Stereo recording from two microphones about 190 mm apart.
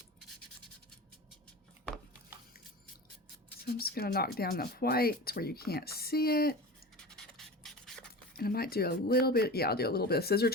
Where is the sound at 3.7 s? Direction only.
55° left (ahead or behind).